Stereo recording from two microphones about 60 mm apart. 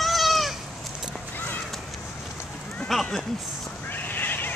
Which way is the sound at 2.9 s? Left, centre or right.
Centre.